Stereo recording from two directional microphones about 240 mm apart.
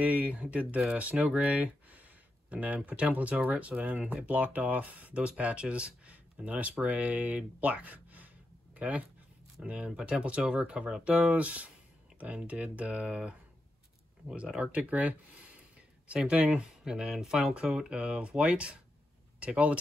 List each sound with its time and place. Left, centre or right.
0.0 s speech: centre